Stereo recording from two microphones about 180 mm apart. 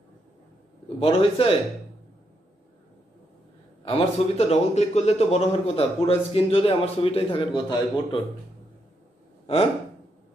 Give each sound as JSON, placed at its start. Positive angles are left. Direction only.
{"t": 0.9, "sound": "a man's voice", "side_deg": 30}
{"t": 3.8, "sound": "a man's voice", "side_deg": 35}